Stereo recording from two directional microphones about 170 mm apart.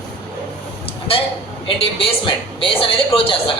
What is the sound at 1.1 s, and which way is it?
A man's voice, 35° left (ahead or behind).